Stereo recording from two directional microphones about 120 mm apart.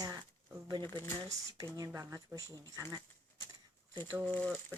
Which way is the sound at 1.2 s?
30° right (ahead or behind).